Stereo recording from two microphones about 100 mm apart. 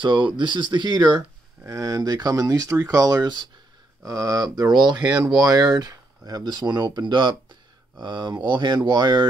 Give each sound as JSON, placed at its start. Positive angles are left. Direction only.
{"t": 0.0, "sound": "speech", "side_deg": -50}
{"t": 1.7, "sound": "speech", "side_deg": -35}
{"t": 4.0, "sound": "speech", "side_deg": -35}